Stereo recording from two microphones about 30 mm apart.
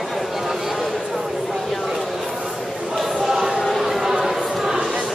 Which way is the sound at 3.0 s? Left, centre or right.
Centre.